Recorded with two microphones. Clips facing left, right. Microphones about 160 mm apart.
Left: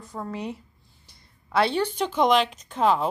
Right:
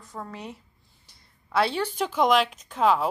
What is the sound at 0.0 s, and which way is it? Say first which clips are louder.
A woman's voice: left 5 dB; centre (ahead or behind).